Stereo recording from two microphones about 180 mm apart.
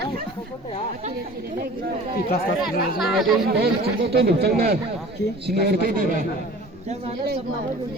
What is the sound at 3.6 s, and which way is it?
Speech, 65° right (ahead or behind).